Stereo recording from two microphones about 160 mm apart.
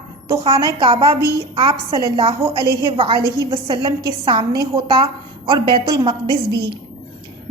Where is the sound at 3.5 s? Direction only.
30° right (ahead or behind).